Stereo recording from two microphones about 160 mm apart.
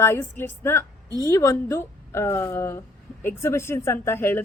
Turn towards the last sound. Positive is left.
turn(degrees=15)  # may be behind; listen again after turning